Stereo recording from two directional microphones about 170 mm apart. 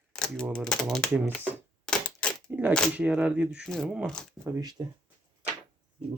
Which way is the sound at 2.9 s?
5° right (ahead or behind).